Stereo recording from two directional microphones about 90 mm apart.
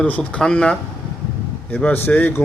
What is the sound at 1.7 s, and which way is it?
Speech, 20° left (ahead or behind).